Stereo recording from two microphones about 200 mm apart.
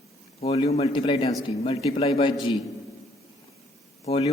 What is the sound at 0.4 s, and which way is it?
A man's voice, 30° left (ahead or behind).